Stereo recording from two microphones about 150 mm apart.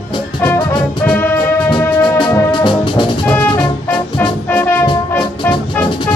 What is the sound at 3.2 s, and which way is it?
Music, 10° left (ahead or behind).